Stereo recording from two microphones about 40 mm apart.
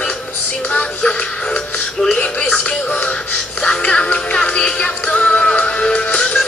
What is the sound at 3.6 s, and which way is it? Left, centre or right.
Music, left.